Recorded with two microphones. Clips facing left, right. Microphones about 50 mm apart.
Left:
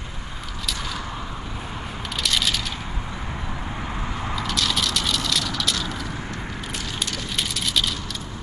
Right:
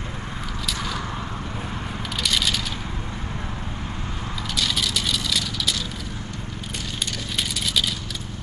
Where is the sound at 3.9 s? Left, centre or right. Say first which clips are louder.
Left 3 dB; left.